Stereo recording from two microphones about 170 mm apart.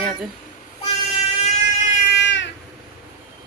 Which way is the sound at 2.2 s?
90° left.